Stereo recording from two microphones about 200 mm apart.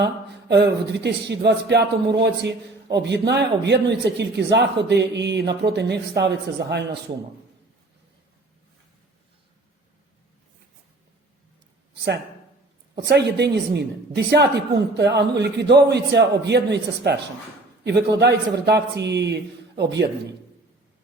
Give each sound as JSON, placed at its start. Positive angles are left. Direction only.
{"t": 0.0, "sound": "speech", "side_deg": -55}
{"t": 11.9, "sound": "speech", "side_deg": -55}